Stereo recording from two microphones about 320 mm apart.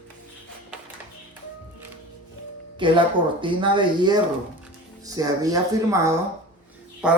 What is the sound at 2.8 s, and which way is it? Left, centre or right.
Speech, centre.